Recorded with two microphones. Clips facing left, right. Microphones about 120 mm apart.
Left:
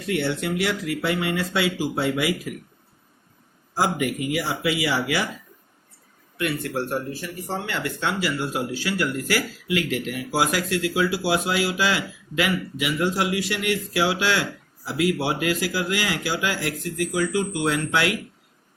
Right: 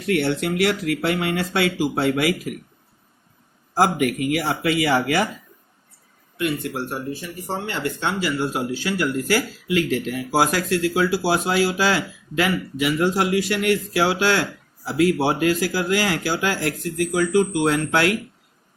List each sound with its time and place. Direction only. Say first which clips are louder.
0.1 s speech: right 3 dB; 60° right (ahead or behind)
3.8 s speech: right 4 dB; 55° right (ahead or behind)
6.3 s a man's voice: right 1 dB; 25° right (ahead or behind); by 18.1 s 45° right (ahead or behind)